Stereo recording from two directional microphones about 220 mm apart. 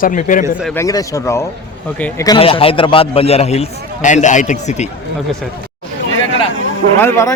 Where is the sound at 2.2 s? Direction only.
20° left (ahead or behind).